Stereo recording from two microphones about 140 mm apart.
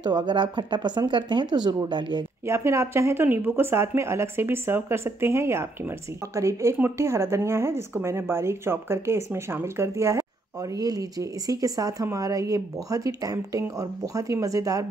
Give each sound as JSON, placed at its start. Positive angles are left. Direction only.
{"t": 0.0, "sound": "speech", "side_deg": -35}
{"t": 2.4, "sound": "speech", "side_deg": -20}